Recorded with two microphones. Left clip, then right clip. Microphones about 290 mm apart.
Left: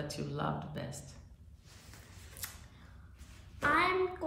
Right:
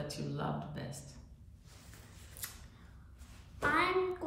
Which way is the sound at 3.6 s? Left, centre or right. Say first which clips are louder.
Left 2 dB; centre.